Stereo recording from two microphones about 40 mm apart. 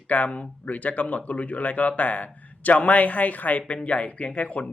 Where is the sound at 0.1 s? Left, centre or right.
Left.